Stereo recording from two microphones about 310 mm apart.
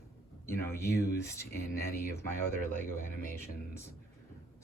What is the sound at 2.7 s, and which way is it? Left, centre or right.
Speech, left.